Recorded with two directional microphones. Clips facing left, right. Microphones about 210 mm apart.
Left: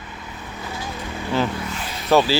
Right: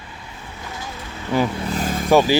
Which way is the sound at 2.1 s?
15° right (ahead or behind).